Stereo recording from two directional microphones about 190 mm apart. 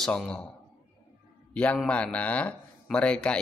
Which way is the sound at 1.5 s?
5° left (ahead or behind).